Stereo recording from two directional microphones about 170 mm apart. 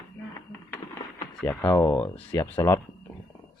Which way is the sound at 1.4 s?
10° left (ahead or behind).